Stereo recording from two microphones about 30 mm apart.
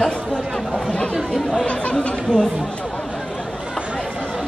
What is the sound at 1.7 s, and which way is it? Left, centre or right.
Chatter, left.